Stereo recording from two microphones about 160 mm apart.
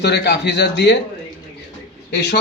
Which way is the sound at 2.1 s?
90° left.